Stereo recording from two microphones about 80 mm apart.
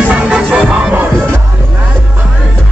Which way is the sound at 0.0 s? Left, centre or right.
Centre.